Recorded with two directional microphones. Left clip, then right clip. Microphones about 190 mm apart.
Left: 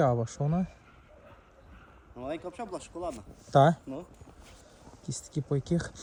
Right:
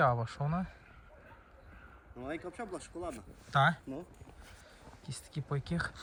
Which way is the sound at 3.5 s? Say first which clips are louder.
Left 6 dB; 25° left (ahead or behind).